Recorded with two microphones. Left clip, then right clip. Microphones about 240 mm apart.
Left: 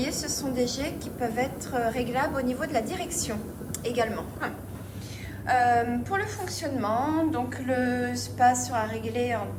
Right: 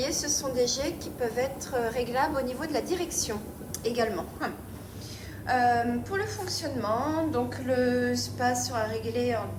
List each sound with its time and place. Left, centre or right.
0.0 s a woman's voice: right